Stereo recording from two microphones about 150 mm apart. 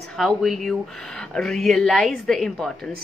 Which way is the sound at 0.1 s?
Centre (ahead or behind).